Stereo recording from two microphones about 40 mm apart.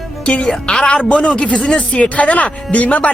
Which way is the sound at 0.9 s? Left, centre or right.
Left.